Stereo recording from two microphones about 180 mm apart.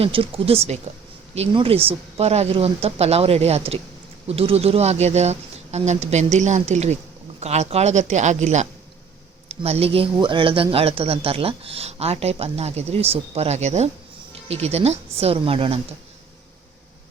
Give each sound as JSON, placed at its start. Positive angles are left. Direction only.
{"t": 0.0, "sound": "speech", "side_deg": -30}